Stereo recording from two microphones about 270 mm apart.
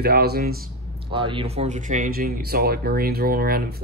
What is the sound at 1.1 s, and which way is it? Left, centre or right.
A man's voice, centre.